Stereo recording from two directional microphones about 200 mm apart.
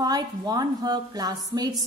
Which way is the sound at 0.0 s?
20° right (ahead or behind).